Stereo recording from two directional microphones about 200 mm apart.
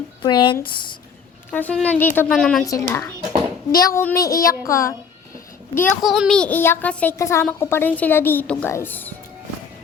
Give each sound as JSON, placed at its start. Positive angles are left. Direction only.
{"t": 0.2, "sound": "speech", "side_deg": 25}
{"t": 1.5, "sound": "a woman's voice", "side_deg": 10}
{"t": 2.6, "sound": "a woman's voice", "side_deg": 15}
{"t": 6.0, "sound": "a woman's voice", "side_deg": 0}